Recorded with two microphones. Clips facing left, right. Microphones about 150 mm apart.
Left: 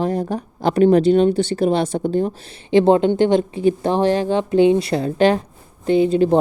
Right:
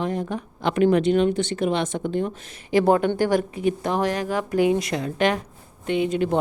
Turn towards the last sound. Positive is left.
turn(degrees=35)  # may be behind; listen again after turning